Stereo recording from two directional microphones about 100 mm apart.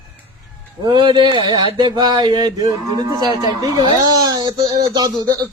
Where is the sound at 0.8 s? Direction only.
50° right (ahead or behind).